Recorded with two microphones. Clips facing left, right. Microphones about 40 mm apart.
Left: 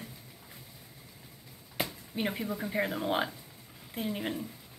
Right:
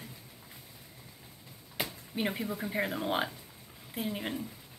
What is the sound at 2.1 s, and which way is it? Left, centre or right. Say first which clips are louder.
Speech: even; centre.